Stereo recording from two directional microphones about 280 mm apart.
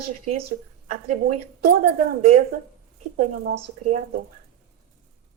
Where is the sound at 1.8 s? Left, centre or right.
Right.